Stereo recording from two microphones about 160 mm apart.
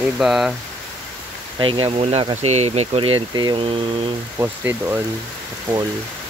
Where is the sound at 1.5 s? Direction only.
30° right (ahead or behind).